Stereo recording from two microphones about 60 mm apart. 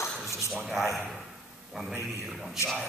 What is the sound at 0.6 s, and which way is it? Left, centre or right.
A man's voice, centre.